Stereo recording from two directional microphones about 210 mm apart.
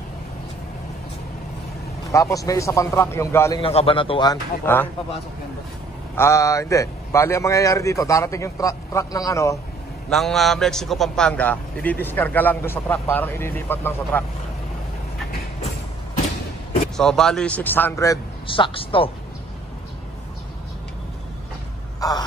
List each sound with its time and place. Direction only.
2.0 s a man's voice: 15° left (ahead or behind)
3.6 s a man's voice: 25° left (ahead or behind)
4.7 s a man's voice: 10° left (ahead or behind)
6.1 s a man's voice: 15° left (ahead or behind)
10.0 s a man's voice: centre (ahead or behind)
16.9 s a man's voice: centre (ahead or behind); by 19.0 s 25° left (ahead or behind)
22.0 s a sound: 15° left (ahead or behind)